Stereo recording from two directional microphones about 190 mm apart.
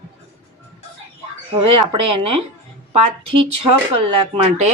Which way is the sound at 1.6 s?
25° right (ahead or behind).